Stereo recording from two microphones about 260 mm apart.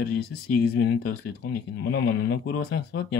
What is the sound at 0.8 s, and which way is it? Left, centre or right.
Speech, left.